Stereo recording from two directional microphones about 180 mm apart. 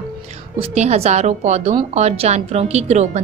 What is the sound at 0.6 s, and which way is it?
A woman's voice, 35° right (ahead or behind).